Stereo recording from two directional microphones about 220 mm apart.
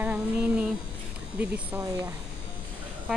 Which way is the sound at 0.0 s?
5° right (ahead or behind).